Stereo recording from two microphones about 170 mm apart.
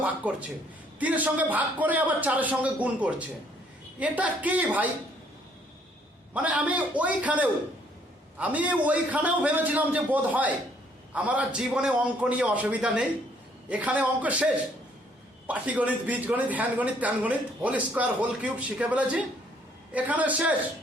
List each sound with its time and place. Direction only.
0.0 s speech: 10° right (ahead or behind)
6.3 s speech: 10° right (ahead or behind)